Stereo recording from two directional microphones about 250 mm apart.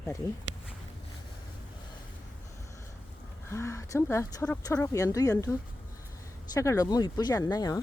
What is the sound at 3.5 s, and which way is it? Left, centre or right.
Speech, centre.